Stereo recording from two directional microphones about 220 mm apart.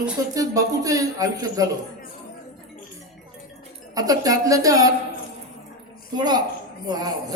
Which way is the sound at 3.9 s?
15° right (ahead or behind).